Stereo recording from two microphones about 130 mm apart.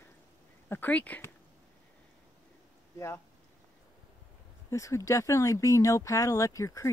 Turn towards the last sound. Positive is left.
turn(degrees=25)  # may be behind; listen again after turning